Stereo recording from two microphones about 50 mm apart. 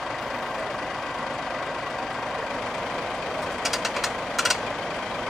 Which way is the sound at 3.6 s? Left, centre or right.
Centre.